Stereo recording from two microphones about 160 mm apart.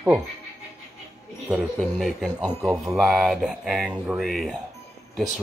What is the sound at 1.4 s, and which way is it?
Speech, 5° right (ahead or behind).